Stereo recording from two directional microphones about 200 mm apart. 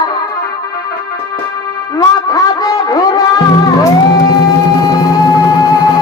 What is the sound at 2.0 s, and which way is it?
Music, 20° left (ahead or behind).